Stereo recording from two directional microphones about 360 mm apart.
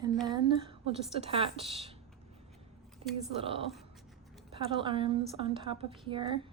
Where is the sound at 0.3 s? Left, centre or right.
Centre.